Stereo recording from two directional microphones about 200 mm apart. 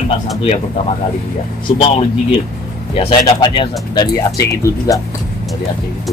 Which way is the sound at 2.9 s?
25° left (ahead or behind).